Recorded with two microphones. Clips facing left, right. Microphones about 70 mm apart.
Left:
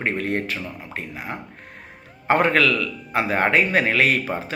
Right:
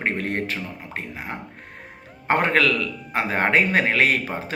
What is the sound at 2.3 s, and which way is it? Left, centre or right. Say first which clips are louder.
A man's voice: left 2 dB; right.